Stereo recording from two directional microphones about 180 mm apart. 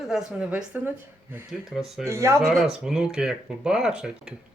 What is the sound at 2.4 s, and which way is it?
Speech, centre (ahead or behind).